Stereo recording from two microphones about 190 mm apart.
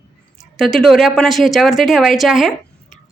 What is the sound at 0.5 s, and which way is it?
A woman's voice, centre (ahead or behind).